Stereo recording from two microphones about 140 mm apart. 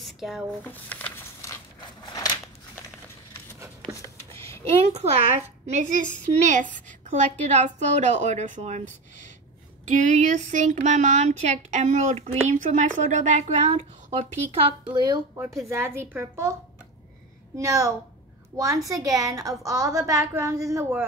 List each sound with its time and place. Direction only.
0.0 s a sound: centre (ahead or behind)
0.7 s a sound: 10° left (ahead or behind)
4.6 s a woman's voice: 45° right (ahead or behind)
14.6 s speech: 35° right (ahead or behind)
15.3 s a woman's voice: 20° right (ahead or behind)
17.6 s a woman's voice: 20° right (ahead or behind)